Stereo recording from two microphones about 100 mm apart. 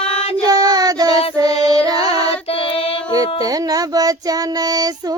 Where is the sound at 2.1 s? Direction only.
70° left (ahead or behind).